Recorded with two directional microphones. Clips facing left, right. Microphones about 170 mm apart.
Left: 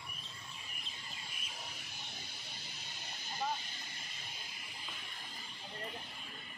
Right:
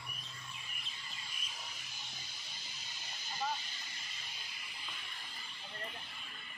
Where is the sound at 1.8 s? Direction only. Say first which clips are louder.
Left 3 dB; 60° left (ahead or behind).